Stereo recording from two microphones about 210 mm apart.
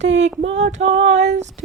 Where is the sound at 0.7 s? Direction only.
30° right (ahead or behind).